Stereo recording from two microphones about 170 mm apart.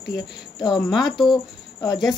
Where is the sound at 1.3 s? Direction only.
20° left (ahead or behind).